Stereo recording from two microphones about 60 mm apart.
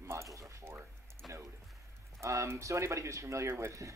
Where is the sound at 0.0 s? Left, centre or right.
Right.